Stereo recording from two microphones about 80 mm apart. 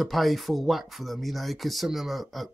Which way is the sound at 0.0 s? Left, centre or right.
Centre.